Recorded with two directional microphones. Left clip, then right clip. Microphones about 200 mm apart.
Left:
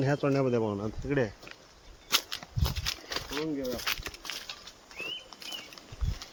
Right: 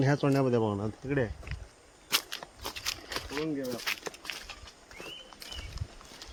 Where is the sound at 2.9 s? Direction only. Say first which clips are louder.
Even; 5° left (ahead or behind).